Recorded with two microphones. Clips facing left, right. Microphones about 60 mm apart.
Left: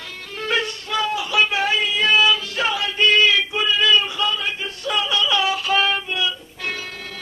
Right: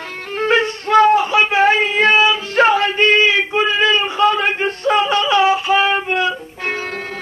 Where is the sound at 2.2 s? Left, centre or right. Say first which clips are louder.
Right 3 dB; right.